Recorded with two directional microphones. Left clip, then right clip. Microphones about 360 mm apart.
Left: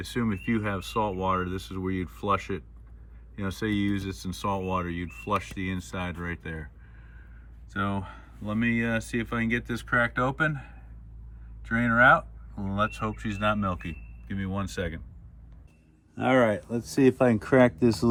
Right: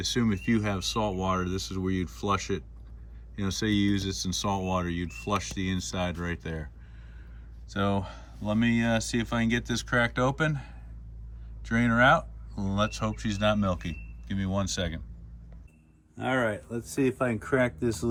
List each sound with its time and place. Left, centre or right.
0.0 s speech: centre
7.7 s speech: centre
16.1 s speech: left